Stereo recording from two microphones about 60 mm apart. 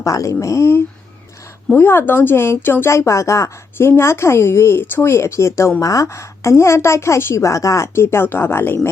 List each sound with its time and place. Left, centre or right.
0.0 s speech: left
1.7 s speech: left
2.9 s speech: left
3.8 s speech: left
5.8 s speech: left
7.3 s speech: left